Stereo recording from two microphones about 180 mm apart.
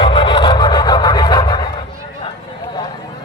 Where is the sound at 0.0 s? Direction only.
30° left (ahead or behind).